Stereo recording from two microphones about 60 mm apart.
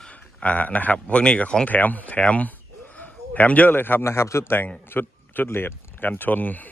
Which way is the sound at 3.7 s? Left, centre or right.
Left.